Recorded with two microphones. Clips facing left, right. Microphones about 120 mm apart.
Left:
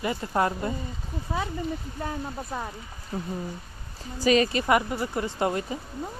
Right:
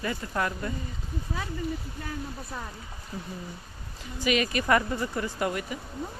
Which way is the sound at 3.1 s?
55° left (ahead or behind).